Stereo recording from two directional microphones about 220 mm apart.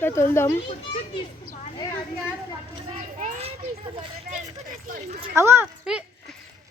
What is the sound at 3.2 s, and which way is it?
Children playing, 30° right (ahead or behind).